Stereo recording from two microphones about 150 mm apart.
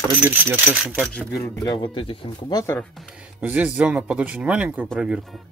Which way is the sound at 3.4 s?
10° right (ahead or behind).